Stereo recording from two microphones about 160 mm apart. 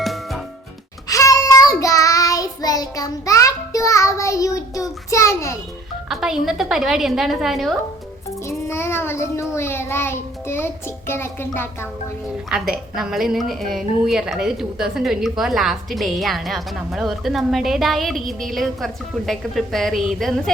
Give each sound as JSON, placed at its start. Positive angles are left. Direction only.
{"t": 0.0, "sound": "music", "side_deg": 0}
{"t": 1.0, "sound": "child singing", "side_deg": 20}
{"t": 6.1, "sound": "a woman's voice", "side_deg": 0}
{"t": 8.4, "sound": "child singing", "side_deg": 15}
{"t": 12.5, "sound": "a woman's voice", "side_deg": -5}